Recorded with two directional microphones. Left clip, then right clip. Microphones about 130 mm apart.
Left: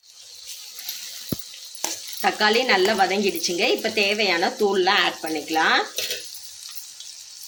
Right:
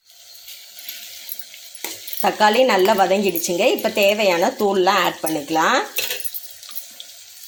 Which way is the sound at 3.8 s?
30° right (ahead or behind).